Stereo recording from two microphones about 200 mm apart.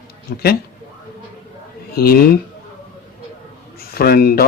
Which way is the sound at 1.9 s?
50° left (ahead or behind).